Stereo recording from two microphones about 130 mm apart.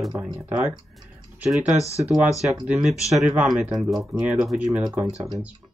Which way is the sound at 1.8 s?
25° left (ahead or behind).